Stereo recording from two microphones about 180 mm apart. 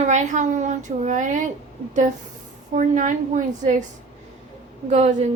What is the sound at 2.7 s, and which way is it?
A woman's voice, 45° right (ahead or behind).